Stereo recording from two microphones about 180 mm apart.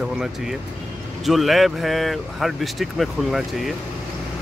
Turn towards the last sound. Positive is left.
turn(degrees=0)  # may be behind; listen again after turning